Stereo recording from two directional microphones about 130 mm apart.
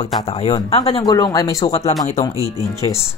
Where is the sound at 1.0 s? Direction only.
30° left (ahead or behind).